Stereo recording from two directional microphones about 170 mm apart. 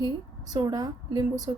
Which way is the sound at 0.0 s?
20° right (ahead or behind).